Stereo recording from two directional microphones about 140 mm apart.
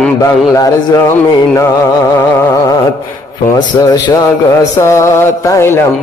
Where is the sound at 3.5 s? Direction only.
25° left (ahead or behind).